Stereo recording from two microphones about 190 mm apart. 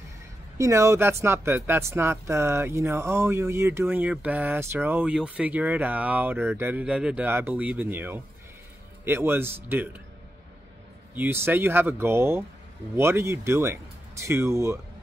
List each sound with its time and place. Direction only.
0.6 s speech: 15° right (ahead or behind)
11.1 s speech: 10° right (ahead or behind)